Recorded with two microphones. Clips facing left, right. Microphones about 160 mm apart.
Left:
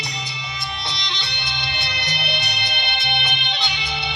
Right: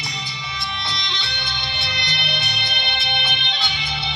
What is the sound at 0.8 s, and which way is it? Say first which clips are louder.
Music: right 1 dB; centre (ahead or behind).